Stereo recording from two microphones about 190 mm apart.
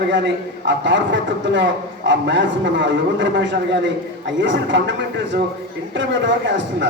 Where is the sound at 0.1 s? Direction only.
70° right (ahead or behind).